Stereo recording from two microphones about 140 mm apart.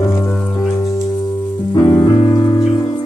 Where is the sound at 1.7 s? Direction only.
25° left (ahead or behind).